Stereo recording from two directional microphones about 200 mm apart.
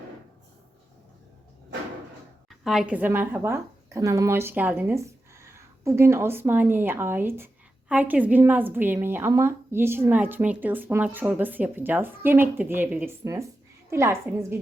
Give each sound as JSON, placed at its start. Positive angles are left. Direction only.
{"t": 2.5, "sound": "speech", "side_deg": 0}